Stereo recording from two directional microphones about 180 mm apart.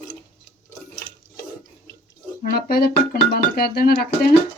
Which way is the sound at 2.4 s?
60° left (ahead or behind).